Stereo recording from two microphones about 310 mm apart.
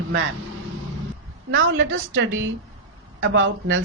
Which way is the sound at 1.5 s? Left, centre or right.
Right.